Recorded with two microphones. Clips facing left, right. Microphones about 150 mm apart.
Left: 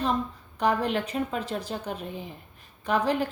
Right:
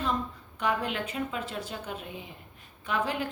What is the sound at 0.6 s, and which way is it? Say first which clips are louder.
A woman's voice: left 5 dB; 35° left (ahead or behind).